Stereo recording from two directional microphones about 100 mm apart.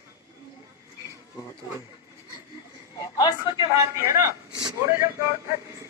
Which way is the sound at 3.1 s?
40° left (ahead or behind).